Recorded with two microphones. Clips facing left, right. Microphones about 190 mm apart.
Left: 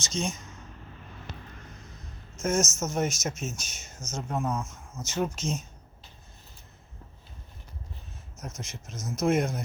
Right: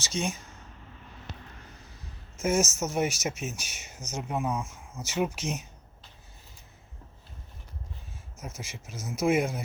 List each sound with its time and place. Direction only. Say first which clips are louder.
0.1 s speech: even; 60° right (ahead or behind)
2.4 s speech: right 1 dB; 10° right (ahead or behind)
8.4 s speech: left 1 dB; 10° right (ahead or behind)